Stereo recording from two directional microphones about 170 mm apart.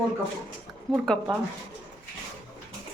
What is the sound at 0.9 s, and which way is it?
Speech, centre (ahead or behind).